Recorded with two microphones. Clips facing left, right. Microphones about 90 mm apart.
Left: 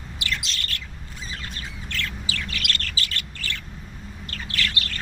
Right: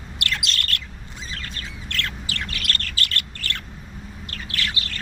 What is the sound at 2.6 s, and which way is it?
Bird, 40° right (ahead or behind).